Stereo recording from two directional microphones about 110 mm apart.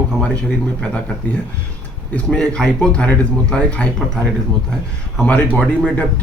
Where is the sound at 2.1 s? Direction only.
10° left (ahead or behind).